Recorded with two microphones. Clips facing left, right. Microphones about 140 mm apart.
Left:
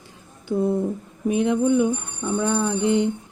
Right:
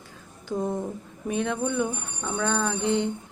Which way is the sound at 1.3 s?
15° left (ahead or behind).